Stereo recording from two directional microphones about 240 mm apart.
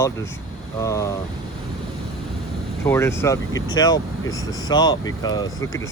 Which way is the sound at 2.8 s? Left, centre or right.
Centre.